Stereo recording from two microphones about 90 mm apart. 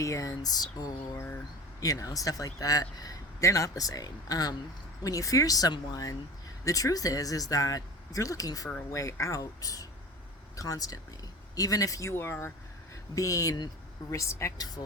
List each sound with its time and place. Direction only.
0.0 s a man's voice: 35° left (ahead or behind)
12.1 s speech: 25° left (ahead or behind)
13.1 s a man's voice: 40° left (ahead or behind)